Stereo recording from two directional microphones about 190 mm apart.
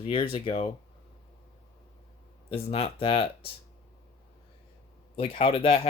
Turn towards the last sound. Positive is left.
turn(degrees=30)  # may be behind; listen again after turning